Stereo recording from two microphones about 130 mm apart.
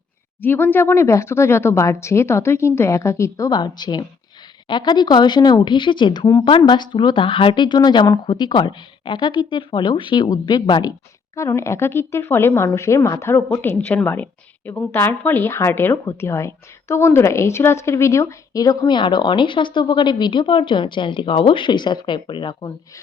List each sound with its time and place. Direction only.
0.4 s speech: 15° left (ahead or behind); by 10.9 s 35° left (ahead or behind)
11.3 s a woman's voice: 25° left (ahead or behind); by 22.5 s 40° left (ahead or behind)